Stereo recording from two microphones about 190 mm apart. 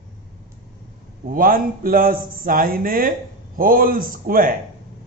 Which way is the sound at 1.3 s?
50° right (ahead or behind).